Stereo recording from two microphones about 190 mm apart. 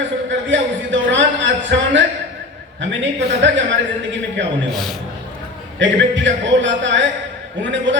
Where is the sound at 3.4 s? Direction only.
75° right (ahead or behind).